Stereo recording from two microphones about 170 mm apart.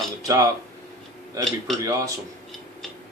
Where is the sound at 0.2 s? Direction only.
20° right (ahead or behind).